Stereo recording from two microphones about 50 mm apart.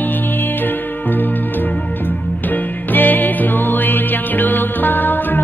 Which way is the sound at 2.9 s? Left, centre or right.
Left.